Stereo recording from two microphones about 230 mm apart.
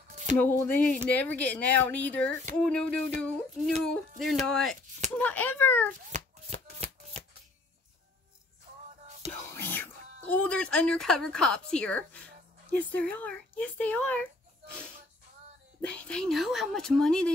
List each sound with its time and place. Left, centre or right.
0.1 s music: right
0.4 s speech: centre
6.1 s shuffling cards: right
9.5 s speech: centre
15.9 s speech: centre